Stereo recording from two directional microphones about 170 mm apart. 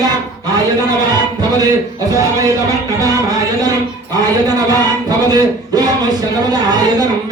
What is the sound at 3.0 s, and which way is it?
Music, 20° right (ahead or behind).